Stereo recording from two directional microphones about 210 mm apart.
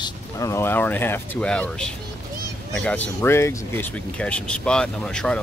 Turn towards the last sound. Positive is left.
turn(degrees=5)  # may be behind; listen again after turning